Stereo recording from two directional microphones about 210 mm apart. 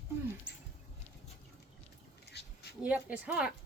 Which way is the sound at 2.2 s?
50° left (ahead or behind).